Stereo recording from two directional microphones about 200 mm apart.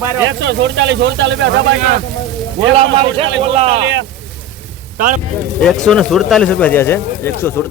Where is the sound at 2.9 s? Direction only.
30° right (ahead or behind).